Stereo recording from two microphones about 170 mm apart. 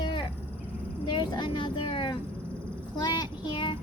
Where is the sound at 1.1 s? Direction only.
30° left (ahead or behind).